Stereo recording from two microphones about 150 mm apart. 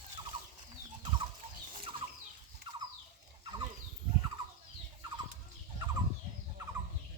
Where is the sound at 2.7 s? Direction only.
35° right (ahead or behind).